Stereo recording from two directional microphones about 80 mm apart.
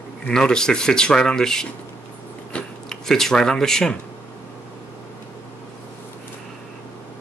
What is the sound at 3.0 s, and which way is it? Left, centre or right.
Speech, centre.